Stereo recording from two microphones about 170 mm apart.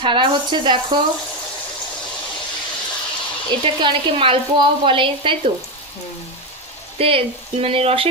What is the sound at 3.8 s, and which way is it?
Speech, 30° right (ahead or behind).